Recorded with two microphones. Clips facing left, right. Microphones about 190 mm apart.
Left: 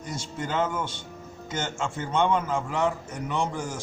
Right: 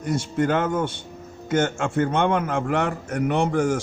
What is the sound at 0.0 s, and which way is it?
A man's voice, 60° right (ahead or behind).